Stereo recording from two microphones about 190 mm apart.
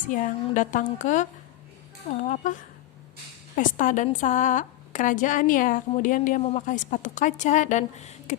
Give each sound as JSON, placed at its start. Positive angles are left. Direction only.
{"t": 0.1, "sound": "a woman's voice", "side_deg": 40}
{"t": 3.5, "sound": "a woman's voice", "side_deg": 45}